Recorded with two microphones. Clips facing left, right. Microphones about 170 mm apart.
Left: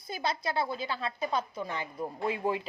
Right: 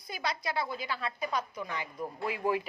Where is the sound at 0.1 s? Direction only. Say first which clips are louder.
Left 2 dB; 25° left (ahead or behind).